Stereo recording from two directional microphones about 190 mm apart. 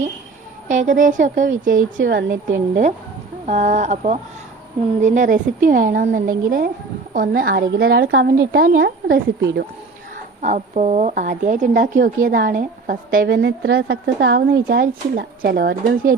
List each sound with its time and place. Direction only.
0.7 s a woman's voice: 40° right (ahead or behind)
9.1 s a woman's voice: 65° right (ahead or behind)
10.4 s a woman's voice: 35° right (ahead or behind); by 16.1 s 60° right (ahead or behind)